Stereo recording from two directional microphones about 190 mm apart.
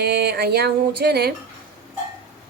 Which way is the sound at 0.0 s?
60° right (ahead or behind).